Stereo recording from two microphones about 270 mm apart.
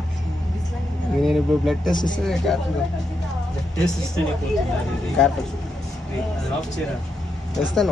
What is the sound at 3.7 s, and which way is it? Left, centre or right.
Speech, centre.